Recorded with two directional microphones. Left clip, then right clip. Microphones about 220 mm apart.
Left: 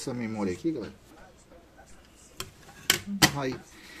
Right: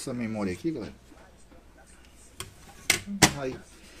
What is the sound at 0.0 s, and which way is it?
Speech, centre (ahead or behind).